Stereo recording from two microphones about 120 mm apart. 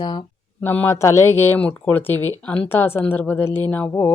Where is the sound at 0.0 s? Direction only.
40° left (ahead or behind).